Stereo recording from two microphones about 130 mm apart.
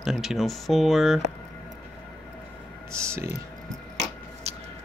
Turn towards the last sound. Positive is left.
turn(degrees=-50)  # may be behind; listen again after turning